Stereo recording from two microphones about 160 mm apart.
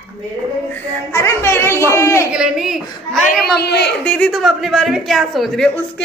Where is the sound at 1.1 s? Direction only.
15° left (ahead or behind).